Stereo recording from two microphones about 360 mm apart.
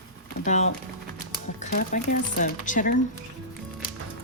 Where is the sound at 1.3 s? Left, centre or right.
Left.